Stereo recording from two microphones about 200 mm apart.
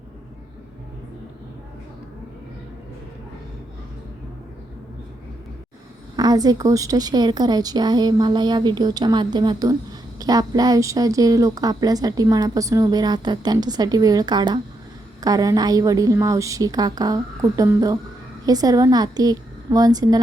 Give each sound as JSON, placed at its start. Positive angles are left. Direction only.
{"t": 6.1, "sound": "a woman's voice", "side_deg": -20}